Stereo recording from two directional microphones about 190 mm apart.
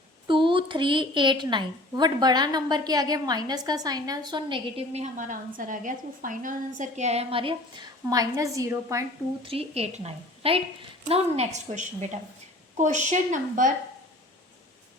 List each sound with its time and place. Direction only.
0.3 s a woman's voice: 25° right (ahead or behind)
9.4 s a woman's voice: 30° right (ahead or behind)